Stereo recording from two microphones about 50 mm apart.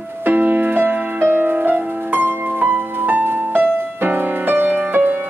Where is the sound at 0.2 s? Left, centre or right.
Right.